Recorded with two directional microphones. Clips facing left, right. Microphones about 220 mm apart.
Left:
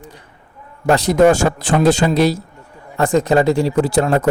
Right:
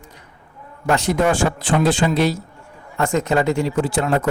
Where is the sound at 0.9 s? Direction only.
35° left (ahead or behind).